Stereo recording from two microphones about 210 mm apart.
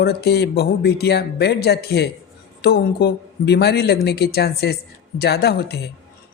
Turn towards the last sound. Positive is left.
turn(degrees=50)  # may be behind; listen again after turning